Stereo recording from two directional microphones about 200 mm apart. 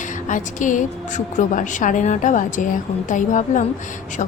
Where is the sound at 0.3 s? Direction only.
40° left (ahead or behind).